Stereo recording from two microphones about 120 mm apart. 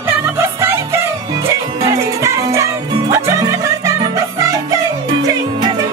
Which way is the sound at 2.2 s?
25° right (ahead or behind).